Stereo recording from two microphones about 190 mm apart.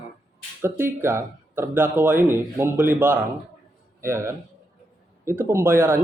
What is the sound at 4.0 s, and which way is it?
Speech, 15° right (ahead or behind).